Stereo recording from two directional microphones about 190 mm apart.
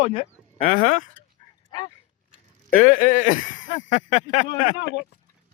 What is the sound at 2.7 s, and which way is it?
Speech, 50° left (ahead or behind).